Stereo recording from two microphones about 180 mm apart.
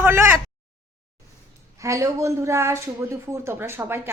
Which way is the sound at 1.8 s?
15° right (ahead or behind).